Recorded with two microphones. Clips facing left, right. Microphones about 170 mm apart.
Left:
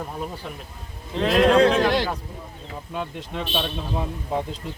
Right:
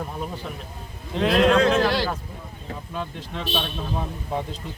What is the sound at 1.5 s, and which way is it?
Speech, 30° left (ahead or behind).